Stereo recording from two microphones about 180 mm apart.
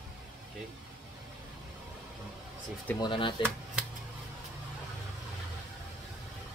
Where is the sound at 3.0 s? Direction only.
25° left (ahead or behind).